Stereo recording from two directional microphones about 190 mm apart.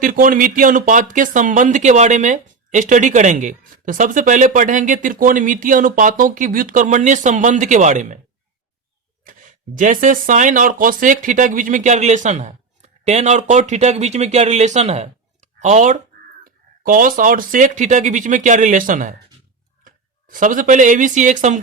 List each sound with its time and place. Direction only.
0.0 s speech: 45° right (ahead or behind)
9.2 s a sound: 45° right (ahead or behind)
9.7 s speech: 45° right (ahead or behind)